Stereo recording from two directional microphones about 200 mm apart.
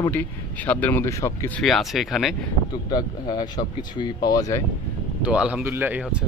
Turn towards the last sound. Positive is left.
turn(degrees=-5)  # may be behind; listen again after turning